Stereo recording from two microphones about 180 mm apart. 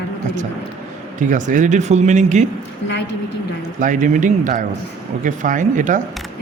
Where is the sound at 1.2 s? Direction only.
45° right (ahead or behind).